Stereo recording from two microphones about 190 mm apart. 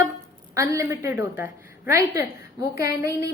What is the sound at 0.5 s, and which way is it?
A woman's voice, 15° right (ahead or behind).